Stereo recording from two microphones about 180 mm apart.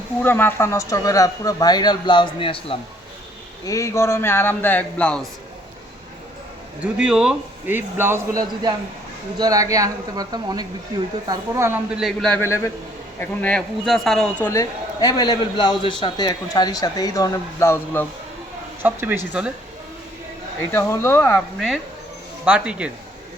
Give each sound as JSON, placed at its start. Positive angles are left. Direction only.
{"t": 0.2, "sound": "a man's voice", "side_deg": 10}
{"t": 3.7, "sound": "speech", "side_deg": 15}
{"t": 6.8, "sound": "a man's voice", "side_deg": -5}
{"t": 11.9, "sound": "a man's voice", "side_deg": 0}
{"t": 18.8, "sound": "a man's voice", "side_deg": -10}
{"t": 20.7, "sound": "speech", "side_deg": 15}
{"t": 22.4, "sound": "a man's voice", "side_deg": -5}